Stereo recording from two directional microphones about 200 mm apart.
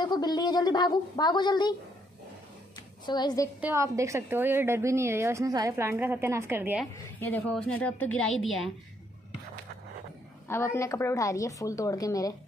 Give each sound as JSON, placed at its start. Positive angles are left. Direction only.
{"t": 0.0, "sound": "a woman's voice", "side_deg": 20}
{"t": 3.1, "sound": "a woman's voice", "side_deg": 20}
{"t": 3.6, "sound": "a woman's voice", "side_deg": -15}
{"t": 7.2, "sound": "a woman's voice", "side_deg": 10}
{"t": 10.5, "sound": "a woman's voice", "side_deg": 10}